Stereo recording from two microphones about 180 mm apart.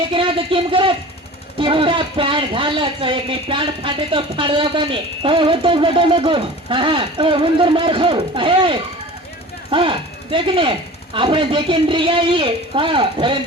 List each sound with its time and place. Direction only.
0.1 s speech: 30° right (ahead or behind)